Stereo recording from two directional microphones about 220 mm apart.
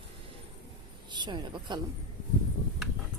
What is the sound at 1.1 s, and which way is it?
Speech, 20° right (ahead or behind).